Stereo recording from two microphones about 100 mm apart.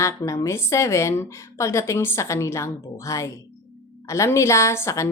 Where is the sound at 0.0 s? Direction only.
30° left (ahead or behind).